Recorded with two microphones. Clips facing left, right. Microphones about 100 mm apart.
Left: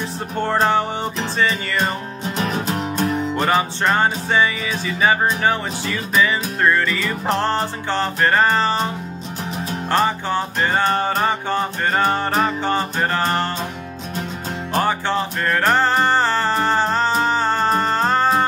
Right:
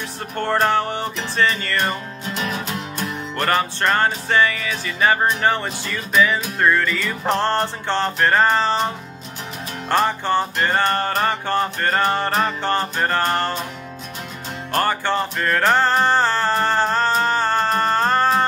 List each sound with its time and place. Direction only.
0.4 s music: 5° left (ahead or behind)
2.3 s music: 35° left (ahead or behind)
3.3 s music: 5° left (ahead or behind)
9.8 s music: centre (ahead or behind)
14.7 s music: 5° left (ahead or behind)